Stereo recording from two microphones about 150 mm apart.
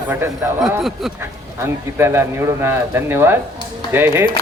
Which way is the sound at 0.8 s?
Centre (ahead or behind).